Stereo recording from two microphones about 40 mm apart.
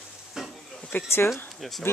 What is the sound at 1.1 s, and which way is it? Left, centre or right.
Speech, left.